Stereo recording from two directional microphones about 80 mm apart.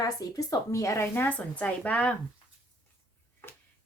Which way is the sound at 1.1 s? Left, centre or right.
Left.